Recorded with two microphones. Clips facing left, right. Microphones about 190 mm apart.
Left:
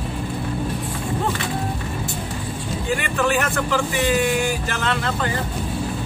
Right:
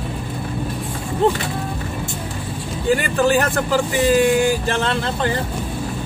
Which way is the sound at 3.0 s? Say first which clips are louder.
Right 2 dB; 35° right (ahead or behind).